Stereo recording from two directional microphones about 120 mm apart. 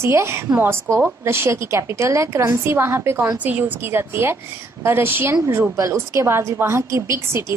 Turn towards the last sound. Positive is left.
turn(degrees=-20)  # may be behind; listen again after turning